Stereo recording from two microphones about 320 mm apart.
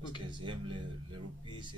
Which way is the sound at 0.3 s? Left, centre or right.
Centre.